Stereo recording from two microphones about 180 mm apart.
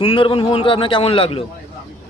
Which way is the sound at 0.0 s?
30° left (ahead or behind).